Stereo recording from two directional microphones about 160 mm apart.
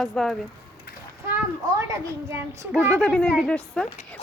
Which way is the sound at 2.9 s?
5° left (ahead or behind).